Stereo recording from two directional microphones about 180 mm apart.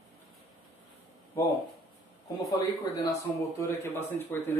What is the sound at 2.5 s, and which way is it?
Speech, 20° left (ahead or behind).